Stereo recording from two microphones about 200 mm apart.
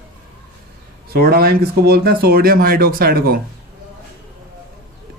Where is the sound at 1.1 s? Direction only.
50° right (ahead or behind).